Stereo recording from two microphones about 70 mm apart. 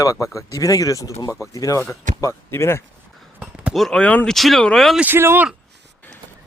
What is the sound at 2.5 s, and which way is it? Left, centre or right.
Speech, left.